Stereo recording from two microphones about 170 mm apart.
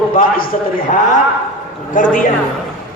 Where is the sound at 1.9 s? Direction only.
50° left (ahead or behind).